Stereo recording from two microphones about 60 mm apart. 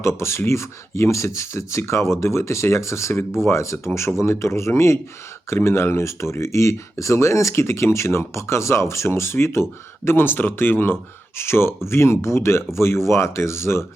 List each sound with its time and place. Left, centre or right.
0.0 s speech: left